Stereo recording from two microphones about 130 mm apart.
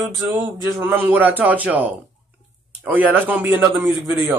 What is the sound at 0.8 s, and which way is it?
Speech, 15° right (ahead or behind).